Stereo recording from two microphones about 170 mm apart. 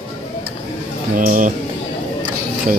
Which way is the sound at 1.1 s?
50° right (ahead or behind).